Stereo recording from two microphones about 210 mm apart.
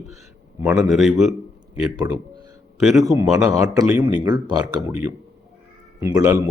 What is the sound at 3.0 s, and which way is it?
Speech, 15° right (ahead or behind).